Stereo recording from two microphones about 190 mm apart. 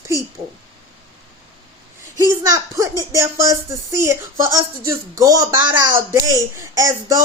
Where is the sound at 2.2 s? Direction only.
15° right (ahead or behind).